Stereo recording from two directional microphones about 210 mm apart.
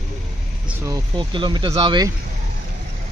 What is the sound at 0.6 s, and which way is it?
Speech, 15° right (ahead or behind).